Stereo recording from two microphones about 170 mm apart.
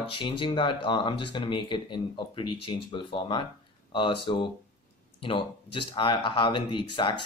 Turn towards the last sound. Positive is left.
turn(degrees=30)  # may be behind; listen again after turning